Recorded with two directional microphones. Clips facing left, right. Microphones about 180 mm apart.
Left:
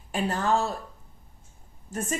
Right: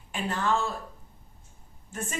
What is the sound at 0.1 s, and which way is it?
Speech, 40° left (ahead or behind).